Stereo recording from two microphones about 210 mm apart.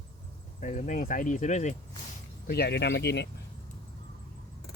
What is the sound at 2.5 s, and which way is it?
Speech, 50° left (ahead or behind).